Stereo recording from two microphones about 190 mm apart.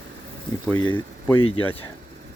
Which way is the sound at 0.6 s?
15° left (ahead or behind).